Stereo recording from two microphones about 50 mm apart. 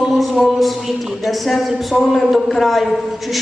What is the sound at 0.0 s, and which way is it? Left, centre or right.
Speech, centre.